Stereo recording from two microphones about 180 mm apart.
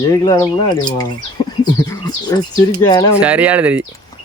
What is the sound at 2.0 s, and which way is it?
A man's voice, 20° left (ahead or behind).